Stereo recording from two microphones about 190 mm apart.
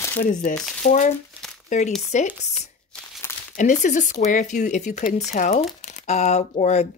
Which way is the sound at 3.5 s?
40° left (ahead or behind).